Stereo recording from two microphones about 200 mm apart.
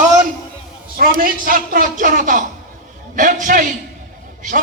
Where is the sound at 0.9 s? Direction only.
45° right (ahead or behind).